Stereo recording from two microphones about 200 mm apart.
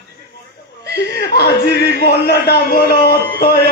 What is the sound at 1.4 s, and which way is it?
A man's voice, 50° left (ahead or behind).